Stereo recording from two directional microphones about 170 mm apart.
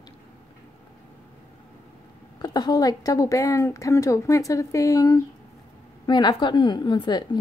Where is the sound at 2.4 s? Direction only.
25° left (ahead or behind).